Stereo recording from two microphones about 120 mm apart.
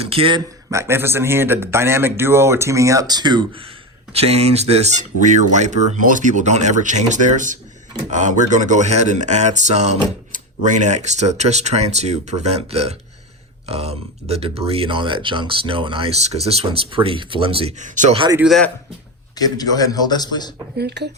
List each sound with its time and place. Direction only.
0.0 s speech: 50° right (ahead or behind)
0.7 s speech: 20° right (ahead or behind); by 3.7 s 45° right (ahead or behind)
4.1 s speech: 60° right (ahead or behind)
16.1 s speech: 60° right (ahead or behind)
17.7 s speech: 90° right
19.4 s a man's voice: 30° left (ahead or behind)